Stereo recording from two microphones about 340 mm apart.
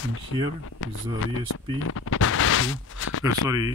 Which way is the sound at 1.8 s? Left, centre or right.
Left.